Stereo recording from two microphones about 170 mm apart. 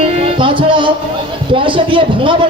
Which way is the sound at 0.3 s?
30° right (ahead or behind).